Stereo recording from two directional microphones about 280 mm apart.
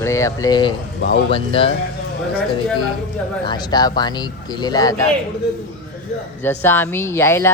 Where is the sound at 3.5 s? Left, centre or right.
Centre.